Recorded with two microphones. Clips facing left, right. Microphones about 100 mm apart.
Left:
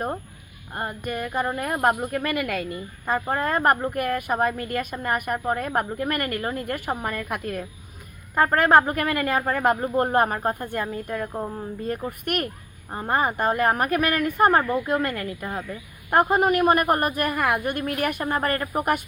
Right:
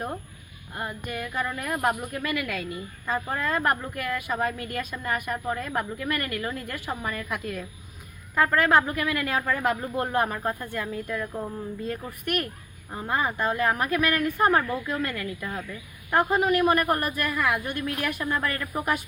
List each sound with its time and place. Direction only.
0.7 s a woman's voice: 45° left (ahead or behind)
3.9 s a woman's voice: 50° left (ahead or behind)
8.4 s a woman's voice: 40° left (ahead or behind)
11.3 s speech: 30° left (ahead or behind)
12.2 s a woman's voice: 55° left (ahead or behind)
16.3 s a woman's voice: 50° left (ahead or behind)
18.8 s speech: 55° left (ahead or behind)